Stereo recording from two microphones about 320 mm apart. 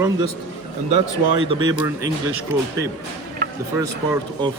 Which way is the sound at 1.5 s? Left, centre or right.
Centre.